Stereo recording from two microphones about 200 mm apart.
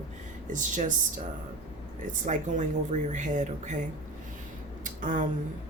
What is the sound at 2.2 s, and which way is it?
Speech, 40° right (ahead or behind).